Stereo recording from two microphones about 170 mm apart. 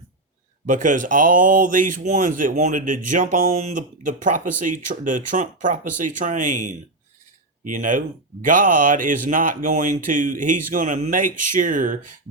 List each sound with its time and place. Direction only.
0.7 s speech: 50° right (ahead or behind)